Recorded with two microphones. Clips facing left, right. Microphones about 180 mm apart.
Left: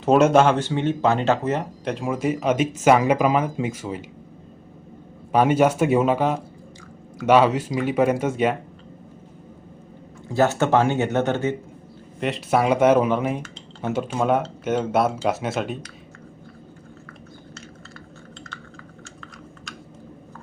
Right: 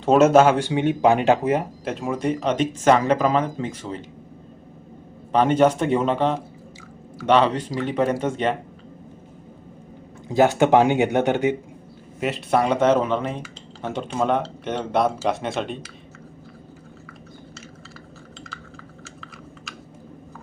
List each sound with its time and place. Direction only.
0.0 s speech: centre (ahead or behind)
5.3 s speech: 10° left (ahead or behind)
10.2 s speech: 15° right (ahead or behind)
12.2 s speech: centre (ahead or behind)